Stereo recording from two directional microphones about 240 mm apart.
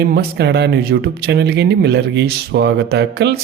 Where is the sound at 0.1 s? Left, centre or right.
Right.